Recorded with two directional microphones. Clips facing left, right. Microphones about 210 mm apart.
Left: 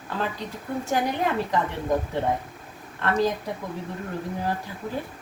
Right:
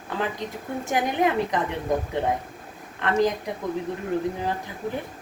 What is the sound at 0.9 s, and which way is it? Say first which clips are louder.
Speech: right 2 dB; 15° right (ahead or behind).